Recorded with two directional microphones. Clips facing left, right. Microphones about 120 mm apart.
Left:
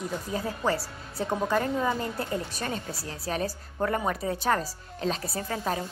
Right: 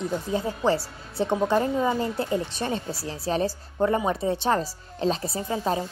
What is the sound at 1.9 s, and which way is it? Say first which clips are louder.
Speech: right 5 dB; 25° right (ahead or behind).